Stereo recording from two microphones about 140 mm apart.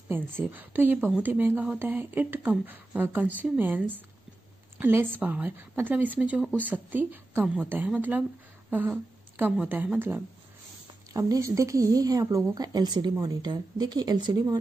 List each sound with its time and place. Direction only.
0.1 s speech: 15° right (ahead or behind)
11.1 s a woman's voice: 25° right (ahead or behind)